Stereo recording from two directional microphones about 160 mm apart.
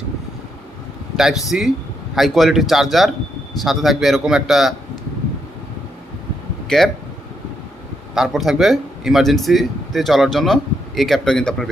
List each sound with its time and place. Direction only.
1.1 s speech: centre (ahead or behind)
6.7 s speech: centre (ahead or behind)
8.1 s speech: centre (ahead or behind)